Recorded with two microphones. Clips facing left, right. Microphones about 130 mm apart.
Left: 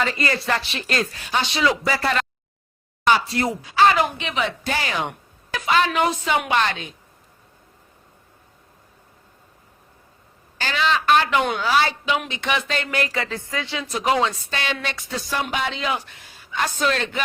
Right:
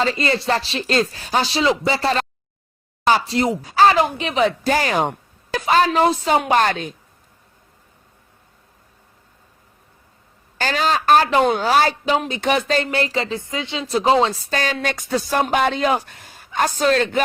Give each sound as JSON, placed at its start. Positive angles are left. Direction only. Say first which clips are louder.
{"t": 0.0, "sound": "speech", "louder": "right 4 dB", "side_deg": -30}
{"t": 3.6, "sound": "speech", "louder": "right 2 dB", "side_deg": -40}
{"t": 10.6, "sound": "speech", "louder": "right 2 dB", "side_deg": -40}